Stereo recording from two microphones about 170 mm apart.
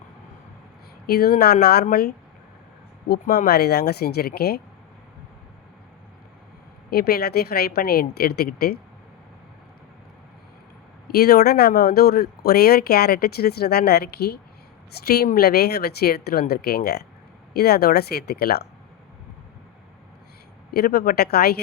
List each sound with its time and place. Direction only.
1.0 s a woman's voice: 65° left (ahead or behind)
6.9 s a woman's voice: 65° left (ahead or behind)
11.1 s speech: 65° left (ahead or behind)
20.7 s speech: 65° left (ahead or behind)